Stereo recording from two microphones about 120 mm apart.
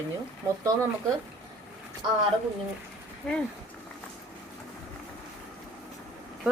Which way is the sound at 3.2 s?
5° left (ahead or behind).